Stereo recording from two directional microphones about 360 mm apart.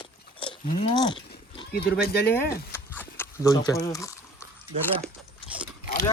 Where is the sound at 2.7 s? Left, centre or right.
Centre.